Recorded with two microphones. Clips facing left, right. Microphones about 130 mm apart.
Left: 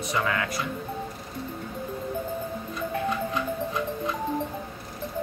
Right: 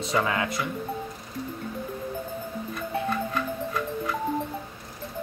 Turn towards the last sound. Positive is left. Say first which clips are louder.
# left 1 dB
turn(degrees=20)  # may be behind; listen again after turning